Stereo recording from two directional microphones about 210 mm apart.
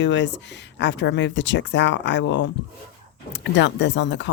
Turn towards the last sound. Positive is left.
turn(degrees=55)  # may be behind; listen again after turning